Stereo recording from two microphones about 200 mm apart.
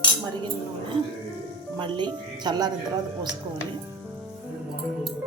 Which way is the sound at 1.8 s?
25° right (ahead or behind).